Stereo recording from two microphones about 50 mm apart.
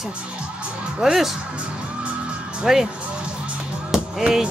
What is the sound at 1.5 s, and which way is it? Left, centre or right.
Music, right.